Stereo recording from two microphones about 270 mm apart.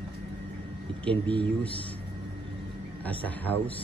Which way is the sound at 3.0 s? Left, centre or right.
Centre.